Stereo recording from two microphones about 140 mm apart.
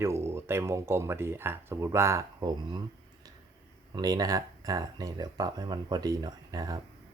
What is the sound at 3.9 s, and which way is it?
Speech, 25° right (ahead or behind).